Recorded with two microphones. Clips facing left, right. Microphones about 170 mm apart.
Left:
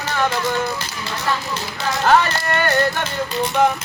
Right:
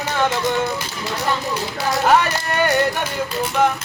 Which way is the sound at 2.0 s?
15° right (ahead or behind).